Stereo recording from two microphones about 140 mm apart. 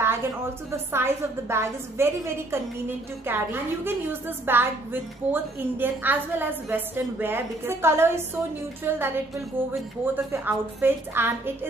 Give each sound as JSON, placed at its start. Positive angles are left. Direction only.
{"t": 0.0, "sound": "a woman's voice", "side_deg": -15}